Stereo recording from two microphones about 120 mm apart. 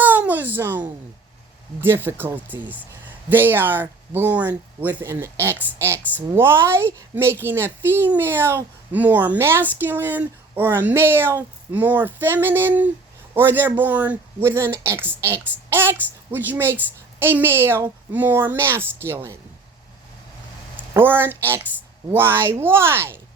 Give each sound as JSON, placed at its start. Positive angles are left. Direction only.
{"t": 0.0, "sound": "a sound", "side_deg": -15}
{"t": 1.8, "sound": "speech", "side_deg": -20}
{"t": 20.9, "sound": "speech", "side_deg": -20}